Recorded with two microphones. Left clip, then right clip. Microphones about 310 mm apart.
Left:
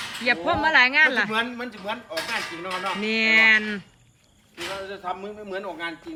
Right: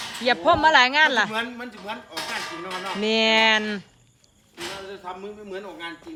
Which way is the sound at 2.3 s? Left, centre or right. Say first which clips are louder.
Left 1 dB; right.